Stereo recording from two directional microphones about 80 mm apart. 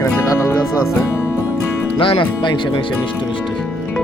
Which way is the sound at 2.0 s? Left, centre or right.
Left.